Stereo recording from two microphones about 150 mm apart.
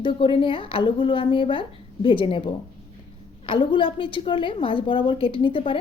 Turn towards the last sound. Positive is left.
turn(degrees=35)  # may be behind; listen again after turning